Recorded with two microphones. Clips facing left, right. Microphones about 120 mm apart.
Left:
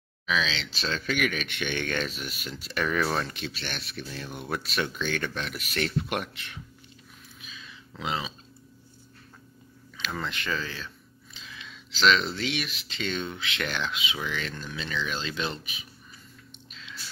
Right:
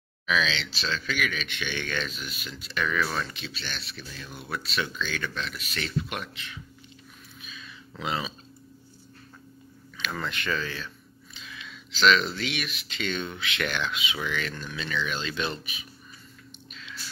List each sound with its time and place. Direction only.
0.3 s speech: 30° left (ahead or behind)
0.8 s speech: 50° left (ahead or behind)
8.0 s speech: 20° left (ahead or behind)
9.9 s speech: 25° left (ahead or behind)